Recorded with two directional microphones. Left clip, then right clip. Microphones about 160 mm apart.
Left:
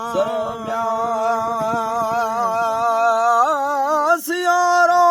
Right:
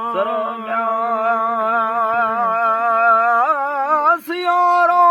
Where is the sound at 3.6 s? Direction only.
45° left (ahead or behind).